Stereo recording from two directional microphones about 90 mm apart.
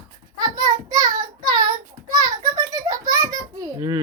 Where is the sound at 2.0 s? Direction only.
45° right (ahead or behind).